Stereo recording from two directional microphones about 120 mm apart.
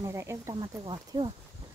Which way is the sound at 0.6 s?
40° right (ahead or behind).